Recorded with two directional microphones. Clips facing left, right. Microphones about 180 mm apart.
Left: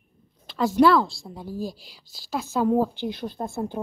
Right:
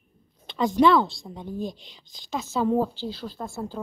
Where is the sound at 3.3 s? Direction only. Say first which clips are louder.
Left 4 dB; 55° left (ahead or behind).